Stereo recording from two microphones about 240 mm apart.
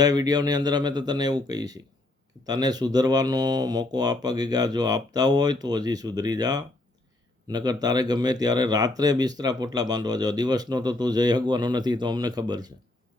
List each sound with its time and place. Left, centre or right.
0.0 s speech: centre